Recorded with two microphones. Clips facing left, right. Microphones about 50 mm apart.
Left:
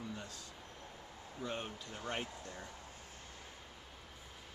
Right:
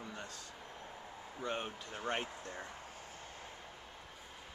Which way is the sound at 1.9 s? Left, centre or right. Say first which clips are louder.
Right 3 dB; centre.